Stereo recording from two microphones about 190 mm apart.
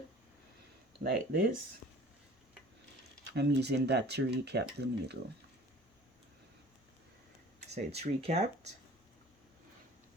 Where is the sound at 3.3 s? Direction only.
65° right (ahead or behind).